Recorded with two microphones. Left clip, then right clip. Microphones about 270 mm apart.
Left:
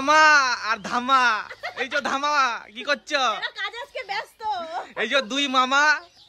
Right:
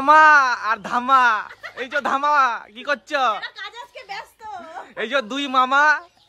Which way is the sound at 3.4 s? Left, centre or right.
Left.